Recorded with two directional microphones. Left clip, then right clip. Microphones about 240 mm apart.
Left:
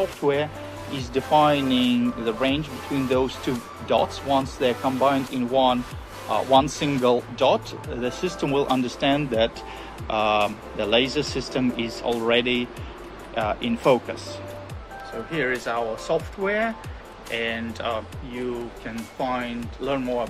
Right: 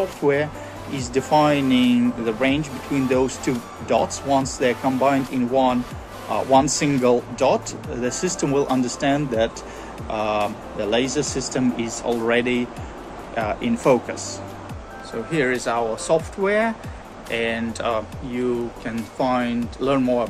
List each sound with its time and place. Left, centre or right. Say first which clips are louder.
0.2 s speech: right 3 dB; centre
15.3 s speech: right 4 dB; centre